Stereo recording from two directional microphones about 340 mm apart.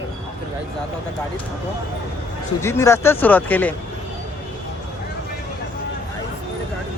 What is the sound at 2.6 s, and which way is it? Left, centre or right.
Speech, centre.